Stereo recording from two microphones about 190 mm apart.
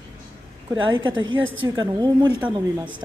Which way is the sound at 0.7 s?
25° right (ahead or behind).